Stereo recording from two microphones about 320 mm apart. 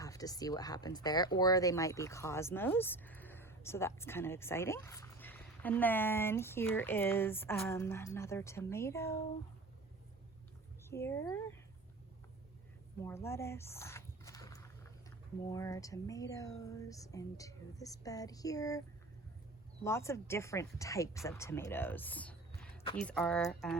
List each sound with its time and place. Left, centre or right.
0.0 s speech: centre
10.8 s speech: centre
13.0 s a sound: centre
15.4 s speech: centre
19.8 s speech: centre